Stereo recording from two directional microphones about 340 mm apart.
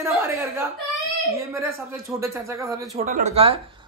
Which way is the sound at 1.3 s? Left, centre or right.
Centre.